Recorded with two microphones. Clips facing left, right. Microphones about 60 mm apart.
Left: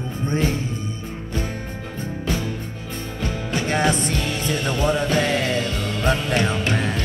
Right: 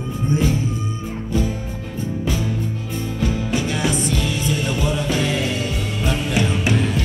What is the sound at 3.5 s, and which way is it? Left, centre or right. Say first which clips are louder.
Music: left 4 dB; left.